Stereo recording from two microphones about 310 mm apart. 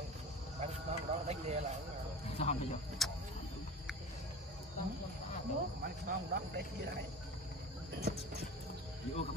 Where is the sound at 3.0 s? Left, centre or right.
Centre.